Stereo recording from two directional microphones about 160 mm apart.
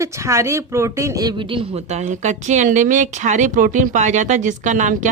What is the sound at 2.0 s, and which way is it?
Speech, 50° right (ahead or behind).